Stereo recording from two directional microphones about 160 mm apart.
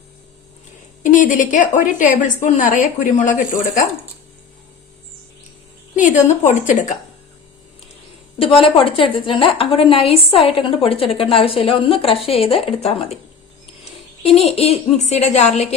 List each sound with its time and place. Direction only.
1.0 s a woman's voice: 55° left (ahead or behind)
6.0 s a woman's voice: 50° left (ahead or behind)
8.4 s a woman's voice: 35° left (ahead or behind)
14.3 s a woman's voice: 35° left (ahead or behind)